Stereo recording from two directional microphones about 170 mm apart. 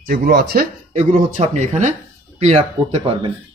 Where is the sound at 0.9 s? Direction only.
40° right (ahead or behind).